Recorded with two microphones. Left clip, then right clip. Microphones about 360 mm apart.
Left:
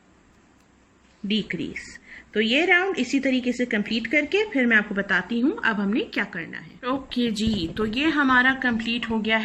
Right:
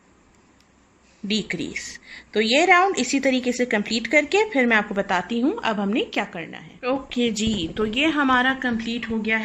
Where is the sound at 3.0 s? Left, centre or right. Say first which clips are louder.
Right 2 dB; right.